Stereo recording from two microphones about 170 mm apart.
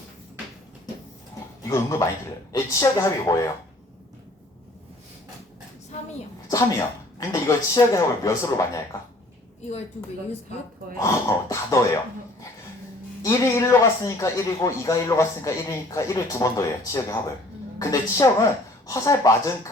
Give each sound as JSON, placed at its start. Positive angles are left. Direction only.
{"t": 1.6, "sound": "a man's voice", "side_deg": 20}
{"t": 6.5, "sound": "a man's voice", "side_deg": 20}
{"t": 11.0, "sound": "speech", "side_deg": 20}
{"t": 13.2, "sound": "a man's voice", "side_deg": 20}